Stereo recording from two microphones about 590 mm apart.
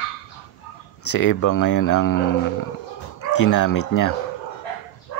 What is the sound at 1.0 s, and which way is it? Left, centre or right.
Speech, left.